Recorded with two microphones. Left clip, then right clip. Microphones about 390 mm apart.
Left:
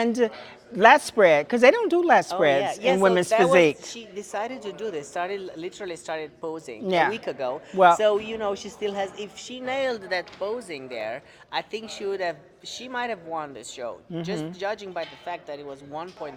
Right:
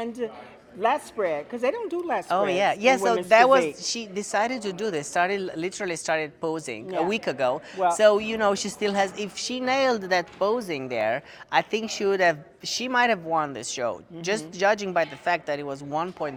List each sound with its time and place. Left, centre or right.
0.0 s speech: left
2.6 s a woman's voice: right
3.5 s speech: left
3.9 s a woman's voice: right
6.8 s speech: left
7.1 s a woman's voice: right